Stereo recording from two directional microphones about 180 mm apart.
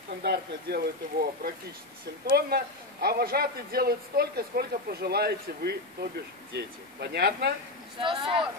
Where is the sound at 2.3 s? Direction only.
60° right (ahead or behind).